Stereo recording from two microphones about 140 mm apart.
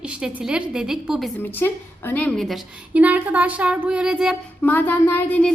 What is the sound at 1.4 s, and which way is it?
A woman's voice, 15° left (ahead or behind).